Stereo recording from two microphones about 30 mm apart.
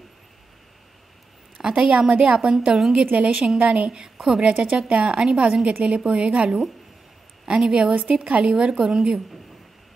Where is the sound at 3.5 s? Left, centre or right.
Right.